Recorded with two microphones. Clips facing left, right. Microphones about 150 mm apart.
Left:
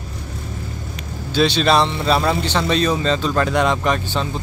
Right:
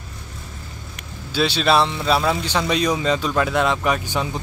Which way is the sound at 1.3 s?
5° right (ahead or behind).